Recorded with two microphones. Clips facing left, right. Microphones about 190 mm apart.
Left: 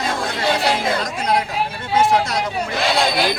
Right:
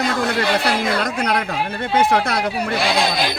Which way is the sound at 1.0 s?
65° right (ahead or behind).